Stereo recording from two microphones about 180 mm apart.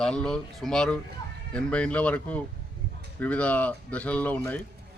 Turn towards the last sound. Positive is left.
turn(degrees=10)  # may be behind; listen again after turning